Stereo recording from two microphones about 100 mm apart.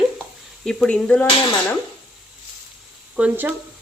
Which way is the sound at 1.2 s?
55° left (ahead or behind).